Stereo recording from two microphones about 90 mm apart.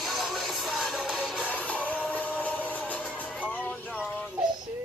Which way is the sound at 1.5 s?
15° left (ahead or behind).